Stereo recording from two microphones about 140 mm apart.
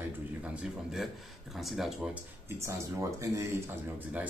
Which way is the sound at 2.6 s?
20° right (ahead or behind).